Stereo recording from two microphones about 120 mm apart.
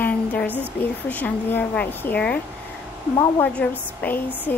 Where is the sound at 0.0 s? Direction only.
15° left (ahead or behind).